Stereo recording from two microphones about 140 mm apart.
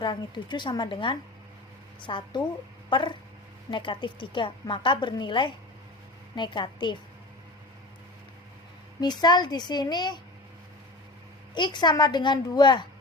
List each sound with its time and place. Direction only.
0.0 s a woman's voice: 35° left (ahead or behind)
9.2 s a woman's voice: 30° left (ahead or behind)
11.5 s a woman's voice: 30° left (ahead or behind)